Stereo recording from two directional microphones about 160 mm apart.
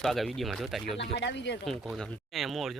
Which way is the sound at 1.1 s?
90° left.